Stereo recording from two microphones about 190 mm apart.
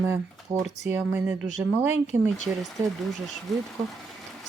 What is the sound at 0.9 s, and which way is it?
Speech, 10° right (ahead or behind).